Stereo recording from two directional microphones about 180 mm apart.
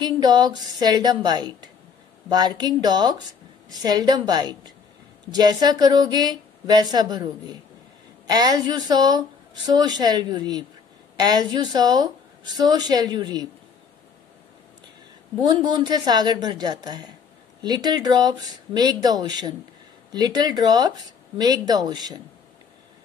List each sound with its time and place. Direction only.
0.0 s a woman's voice: 20° right (ahead or behind)
15.4 s a woman's voice: 25° right (ahead or behind)